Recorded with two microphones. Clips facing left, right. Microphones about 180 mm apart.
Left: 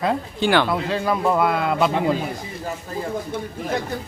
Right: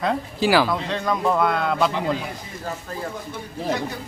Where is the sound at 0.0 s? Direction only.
Centre (ahead or behind).